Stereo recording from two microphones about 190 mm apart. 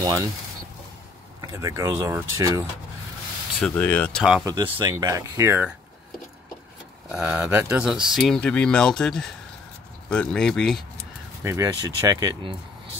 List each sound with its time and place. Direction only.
0.0 s speech: 20° right (ahead or behind)
1.4 s speech: 15° right (ahead or behind)
3.5 s speech: 5° left (ahead or behind)
4.2 s speech: centre (ahead or behind)
4.5 s speech: 20° right (ahead or behind)
7.1 s speech: 5° right (ahead or behind)
11.4 s speech: 15° right (ahead or behind)